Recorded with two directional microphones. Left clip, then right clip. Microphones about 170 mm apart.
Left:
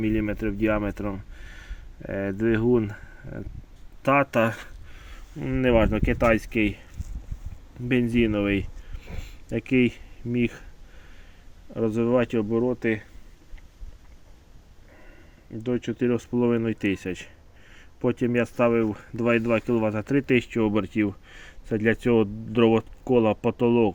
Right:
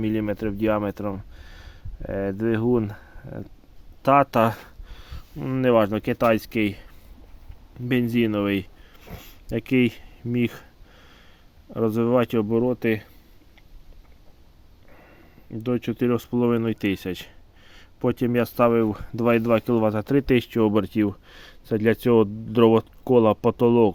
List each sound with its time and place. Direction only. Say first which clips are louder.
0.0 s speech: right 1 dB; 20° right (ahead or behind)
7.9 s speech: even; 15° right (ahead or behind)
11.9 s speech: right 2 dB; 25° right (ahead or behind)
12.5 s speech: right 2 dB; 40° right (ahead or behind)
15.6 s speech: right 1 dB; 40° right (ahead or behind)
16.1 s speech: right 1 dB; 20° right (ahead or behind)